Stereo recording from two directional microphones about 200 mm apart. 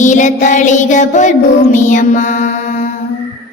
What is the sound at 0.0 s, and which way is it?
Child singing, 40° left (ahead or behind).